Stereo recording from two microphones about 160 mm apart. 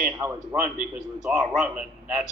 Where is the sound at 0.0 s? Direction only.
10° right (ahead or behind).